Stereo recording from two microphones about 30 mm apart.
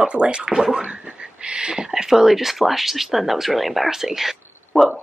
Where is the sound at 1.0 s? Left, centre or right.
Right.